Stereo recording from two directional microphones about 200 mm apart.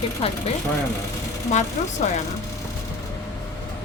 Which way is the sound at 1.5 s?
35° left (ahead or behind).